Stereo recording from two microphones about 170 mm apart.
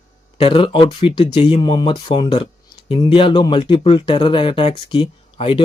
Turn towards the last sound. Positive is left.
turn(degrees=30)  # may be behind; listen again after turning